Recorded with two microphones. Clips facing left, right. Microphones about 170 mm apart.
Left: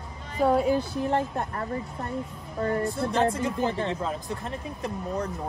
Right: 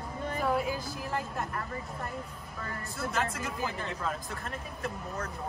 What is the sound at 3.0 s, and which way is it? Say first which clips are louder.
Speech: left 4 dB; 30° left (ahead or behind).